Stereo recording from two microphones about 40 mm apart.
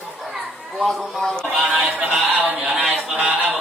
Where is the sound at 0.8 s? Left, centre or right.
Centre.